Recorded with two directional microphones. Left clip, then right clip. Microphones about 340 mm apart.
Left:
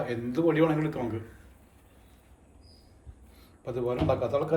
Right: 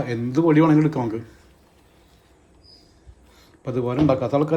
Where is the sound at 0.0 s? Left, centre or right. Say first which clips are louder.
Right 6 dB; centre.